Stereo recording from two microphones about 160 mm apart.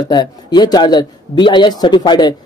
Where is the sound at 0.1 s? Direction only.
25° left (ahead or behind).